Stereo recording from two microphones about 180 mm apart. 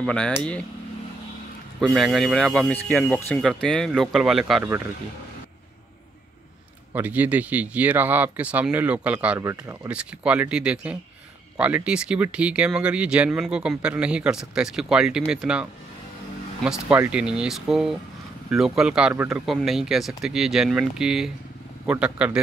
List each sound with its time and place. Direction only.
0.0 s speech: 5° left (ahead or behind)
1.8 s speech: centre (ahead or behind)
6.9 s speech: 10° right (ahead or behind)
9.4 s speech: 15° right (ahead or behind)
9.8 s speech: 5° right (ahead or behind)